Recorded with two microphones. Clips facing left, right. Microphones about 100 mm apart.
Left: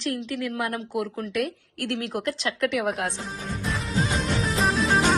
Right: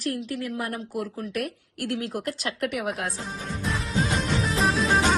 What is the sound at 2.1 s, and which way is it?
Speech, 40° left (ahead or behind).